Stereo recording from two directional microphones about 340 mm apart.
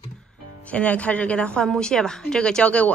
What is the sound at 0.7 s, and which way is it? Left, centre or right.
A woman's voice, centre.